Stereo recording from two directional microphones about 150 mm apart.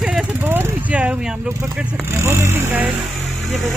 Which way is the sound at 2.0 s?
20° right (ahead or behind).